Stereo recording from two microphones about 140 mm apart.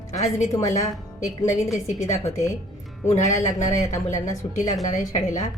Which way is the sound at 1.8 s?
55° left (ahead or behind).